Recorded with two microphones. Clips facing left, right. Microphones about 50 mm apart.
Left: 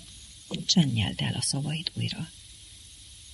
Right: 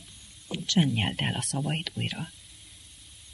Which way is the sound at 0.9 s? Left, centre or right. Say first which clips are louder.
Right 2 dB; centre.